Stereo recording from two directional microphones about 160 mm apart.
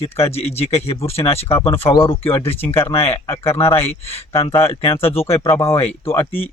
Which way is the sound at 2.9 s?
35° left (ahead or behind).